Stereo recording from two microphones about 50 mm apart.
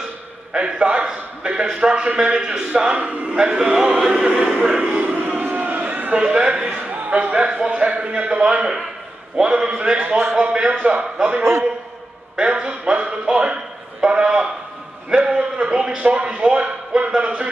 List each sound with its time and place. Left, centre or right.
0.5 s a man's voice: right
4.4 s a man's voice: right
4.8 s music: right
5.5 s a sound: right
6.1 s a man's voice: centre